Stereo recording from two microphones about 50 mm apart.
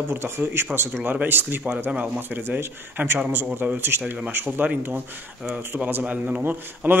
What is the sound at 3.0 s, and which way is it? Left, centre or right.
Speech, right.